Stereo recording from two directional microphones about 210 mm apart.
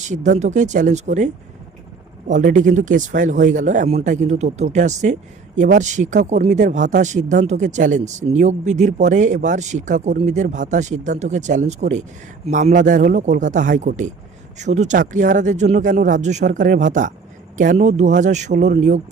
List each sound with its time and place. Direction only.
0.1 s speech: 35° right (ahead or behind)